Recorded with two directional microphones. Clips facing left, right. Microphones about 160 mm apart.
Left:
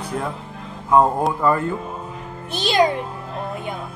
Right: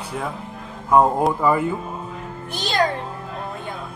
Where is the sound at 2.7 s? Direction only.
15° left (ahead or behind).